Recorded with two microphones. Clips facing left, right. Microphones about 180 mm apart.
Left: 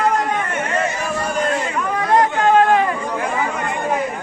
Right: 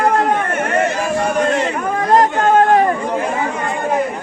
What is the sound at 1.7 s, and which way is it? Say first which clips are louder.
Chatter: even; 45° right (ahead or behind).